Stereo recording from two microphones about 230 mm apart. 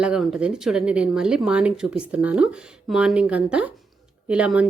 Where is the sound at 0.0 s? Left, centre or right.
Centre.